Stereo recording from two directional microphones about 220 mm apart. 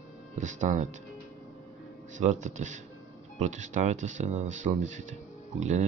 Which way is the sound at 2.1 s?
35° right (ahead or behind).